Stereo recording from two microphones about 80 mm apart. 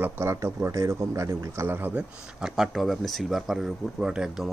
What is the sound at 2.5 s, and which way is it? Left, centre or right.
Speech, centre.